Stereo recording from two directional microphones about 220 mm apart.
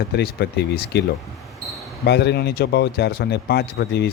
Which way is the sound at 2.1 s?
50° left (ahead or behind).